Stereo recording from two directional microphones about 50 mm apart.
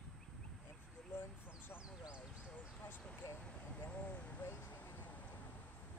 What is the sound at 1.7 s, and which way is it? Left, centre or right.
Speech, left.